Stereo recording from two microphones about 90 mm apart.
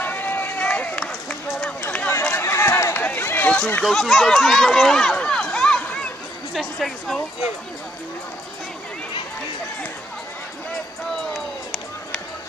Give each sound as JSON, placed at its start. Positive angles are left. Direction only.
{"t": 0.0, "sound": "run", "side_deg": 20}
{"t": 2.9, "sound": "run", "side_deg": 20}
{"t": 3.8, "sound": "speech", "side_deg": 0}